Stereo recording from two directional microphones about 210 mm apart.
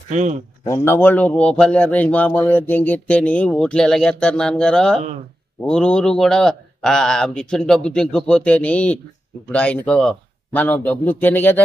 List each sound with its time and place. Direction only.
0.1 s speech: 35° right (ahead or behind)
0.7 s speech: 15° left (ahead or behind)